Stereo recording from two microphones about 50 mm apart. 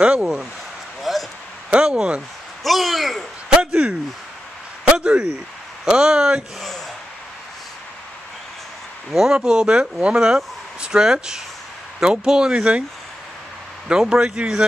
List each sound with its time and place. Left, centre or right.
0.0 s speech: right
1.1 s a sound: centre
1.7 s speech: centre
2.6 s a man's voice: centre
3.4 s speech: centre
4.8 s a sound: centre
5.9 s speech: centre
9.1 s speech: centre
13.8 s speech: centre